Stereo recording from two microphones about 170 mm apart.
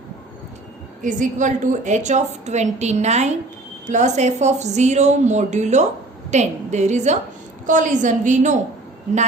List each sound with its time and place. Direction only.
1.0 s a woman's voice: 45° right (ahead or behind)